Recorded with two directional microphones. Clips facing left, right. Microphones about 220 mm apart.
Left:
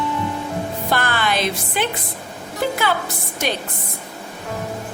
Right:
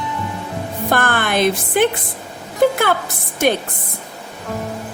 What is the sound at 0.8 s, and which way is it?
Music, 50° right (ahead or behind).